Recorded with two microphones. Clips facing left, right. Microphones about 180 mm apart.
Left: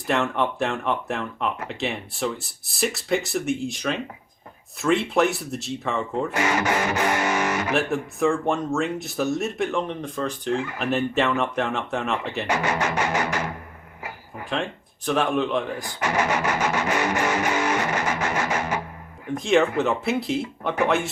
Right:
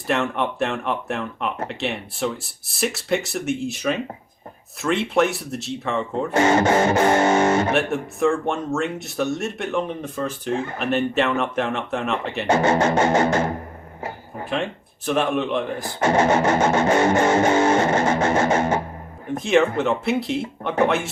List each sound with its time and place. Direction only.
0.1 s speech: centre (ahead or behind)
6.3 s music: 25° right (ahead or behind)
7.7 s speech: centre (ahead or behind)
12.5 s music: 25° right (ahead or behind)
14.5 s speech: centre (ahead or behind)
16.0 s music: 25° right (ahead or behind)
19.4 s speech: centre (ahead or behind)